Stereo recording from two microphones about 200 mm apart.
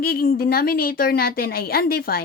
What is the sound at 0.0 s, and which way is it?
A woman's voice, 50° left (ahead or behind).